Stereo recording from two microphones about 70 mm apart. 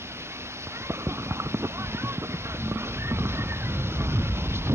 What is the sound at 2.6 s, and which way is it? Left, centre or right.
Vehicle, right.